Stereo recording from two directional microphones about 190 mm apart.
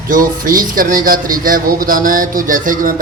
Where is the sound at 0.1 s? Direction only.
45° right (ahead or behind).